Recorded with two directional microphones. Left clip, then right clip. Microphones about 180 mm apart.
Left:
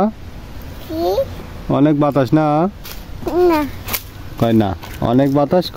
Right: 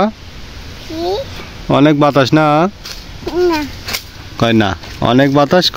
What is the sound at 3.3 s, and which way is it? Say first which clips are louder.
Speech: even; 20° left (ahead or behind).